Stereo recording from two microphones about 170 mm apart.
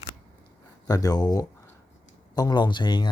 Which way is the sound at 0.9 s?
20° left (ahead or behind).